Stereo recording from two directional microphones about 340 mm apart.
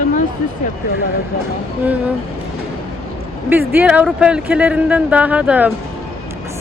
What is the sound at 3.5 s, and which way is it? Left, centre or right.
Speech, centre.